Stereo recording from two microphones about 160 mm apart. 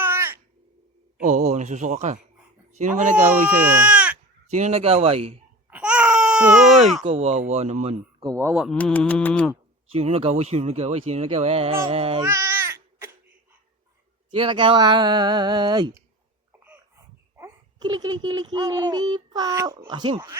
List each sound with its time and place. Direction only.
0.0 s crow: 15° right (ahead or behind)
1.2 s a sound: 50° right (ahead or behind)
2.7 s speech: 50° right (ahead or behind)
3.7 s sheep: 10° right (ahead or behind)
4.5 s speech: 45° right (ahead or behind)
5.7 s baby cry: 10° right (ahead or behind)
7.0 s speech: 40° right (ahead or behind)
8.2 s speech: 20° right (ahead or behind)
8.7 s mantra: 10° left (ahead or behind)
9.9 s speech: 40° right (ahead or behind)
12.2 s babbling: 15° right (ahead or behind)
14.3 s speech: 35° right (ahead or behind)
17.3 s babbling: 15° right (ahead or behind)
17.8 s speech: 25° right (ahead or behind)